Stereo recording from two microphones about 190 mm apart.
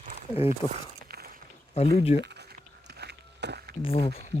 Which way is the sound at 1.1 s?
55° right (ahead or behind).